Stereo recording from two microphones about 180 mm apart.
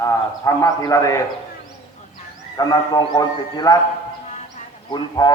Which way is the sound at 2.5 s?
20° left (ahead or behind).